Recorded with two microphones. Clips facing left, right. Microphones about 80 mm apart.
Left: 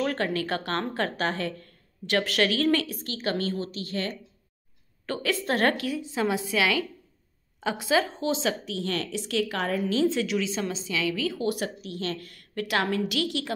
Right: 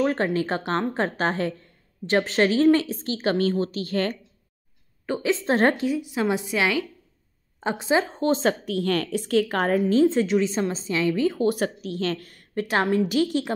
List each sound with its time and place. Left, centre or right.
0.0 s a woman's voice: right
5.0 s a woman's voice: centre
8.1 s a woman's voice: right